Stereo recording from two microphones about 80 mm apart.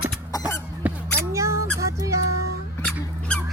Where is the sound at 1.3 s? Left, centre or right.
Right.